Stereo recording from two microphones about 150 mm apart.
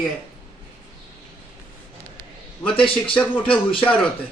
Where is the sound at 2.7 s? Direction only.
35° left (ahead or behind).